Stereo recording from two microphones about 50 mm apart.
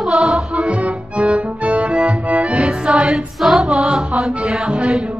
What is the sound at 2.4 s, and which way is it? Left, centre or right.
Music, centre.